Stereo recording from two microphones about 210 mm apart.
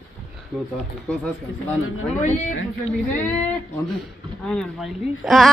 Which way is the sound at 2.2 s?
35° left (ahead or behind).